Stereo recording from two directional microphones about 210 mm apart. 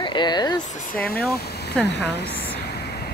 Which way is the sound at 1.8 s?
55° left (ahead or behind).